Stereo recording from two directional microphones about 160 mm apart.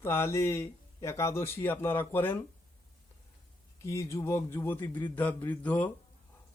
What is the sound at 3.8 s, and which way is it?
Speech, 20° left (ahead or behind).